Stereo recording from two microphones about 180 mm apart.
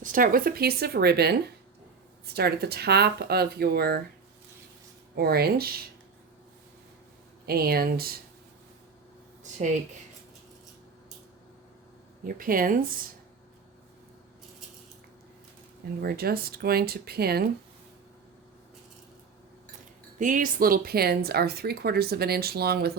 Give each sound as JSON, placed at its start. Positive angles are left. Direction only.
{"t": 0.0, "sound": "speech", "side_deg": -50}
{"t": 5.1, "sound": "speech", "side_deg": -60}
{"t": 7.4, "sound": "speech", "side_deg": -60}
{"t": 9.4, "sound": "speech", "side_deg": -45}
{"t": 12.2, "sound": "speech", "side_deg": -50}
{"t": 16.0, "sound": "speech", "side_deg": -60}
{"t": 20.1, "sound": "speech", "side_deg": -45}